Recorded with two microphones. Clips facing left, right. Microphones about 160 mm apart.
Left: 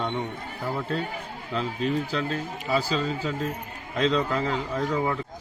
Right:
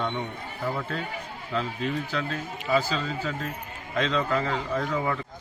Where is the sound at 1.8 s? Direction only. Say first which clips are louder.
Left 3 dB; 30° left (ahead or behind).